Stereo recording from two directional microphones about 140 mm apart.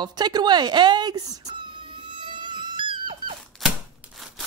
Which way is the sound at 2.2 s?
35° right (ahead or behind).